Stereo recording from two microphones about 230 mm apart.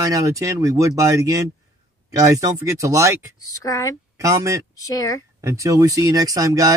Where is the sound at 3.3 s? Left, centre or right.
Centre.